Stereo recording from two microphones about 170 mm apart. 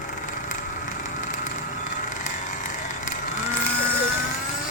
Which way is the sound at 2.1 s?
50° left (ahead or behind).